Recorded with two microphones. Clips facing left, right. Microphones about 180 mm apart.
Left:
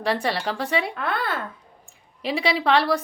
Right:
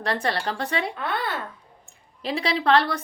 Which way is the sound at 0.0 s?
5° left (ahead or behind).